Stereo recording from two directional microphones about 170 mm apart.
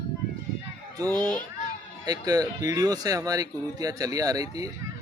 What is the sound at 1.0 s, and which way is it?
Speech, 10° left (ahead or behind).